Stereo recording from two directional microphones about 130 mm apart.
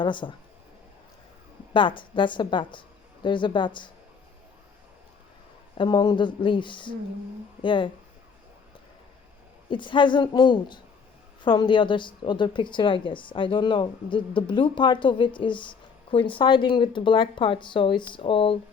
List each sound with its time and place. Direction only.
0.0 s a woman's voice: 35° left (ahead or behind)
1.7 s a woman's voice: 40° left (ahead or behind)
5.7 s a woman's voice: 35° left (ahead or behind)
9.6 s a woman's voice: 40° left (ahead or behind)